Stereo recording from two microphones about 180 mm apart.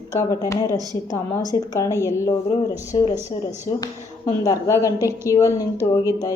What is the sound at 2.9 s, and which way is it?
A woman's voice, 25° left (ahead or behind).